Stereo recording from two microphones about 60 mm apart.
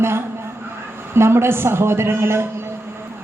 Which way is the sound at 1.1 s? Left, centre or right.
Right.